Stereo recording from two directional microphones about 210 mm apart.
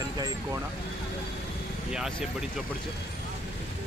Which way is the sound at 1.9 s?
5° right (ahead or behind).